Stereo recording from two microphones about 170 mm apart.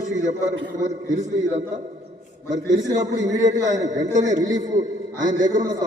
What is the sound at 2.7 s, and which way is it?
Speech, 20° right (ahead or behind).